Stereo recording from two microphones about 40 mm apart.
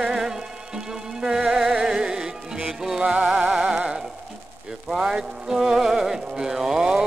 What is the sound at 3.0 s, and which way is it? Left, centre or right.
Music, right.